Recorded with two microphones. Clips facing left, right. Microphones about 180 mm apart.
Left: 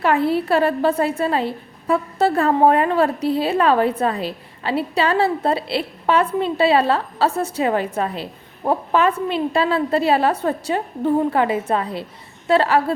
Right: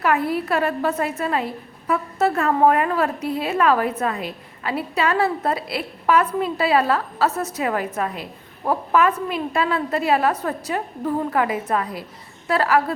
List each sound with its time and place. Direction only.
0.0 s a woman's voice: 30° left (ahead or behind)